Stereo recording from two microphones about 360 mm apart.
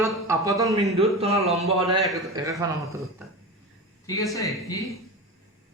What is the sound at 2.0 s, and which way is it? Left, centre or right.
A man's voice, centre.